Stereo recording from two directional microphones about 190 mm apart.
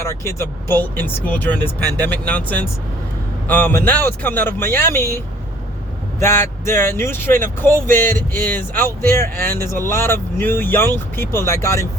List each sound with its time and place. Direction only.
0.1 s speech: 15° left (ahead or behind)